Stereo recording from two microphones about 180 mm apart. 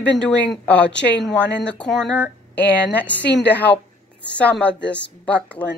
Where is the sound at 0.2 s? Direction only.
5° left (ahead or behind).